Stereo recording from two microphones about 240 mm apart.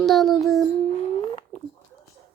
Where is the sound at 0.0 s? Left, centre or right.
Centre.